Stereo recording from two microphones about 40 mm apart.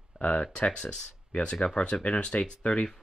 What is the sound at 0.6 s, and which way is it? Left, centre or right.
Speech, left.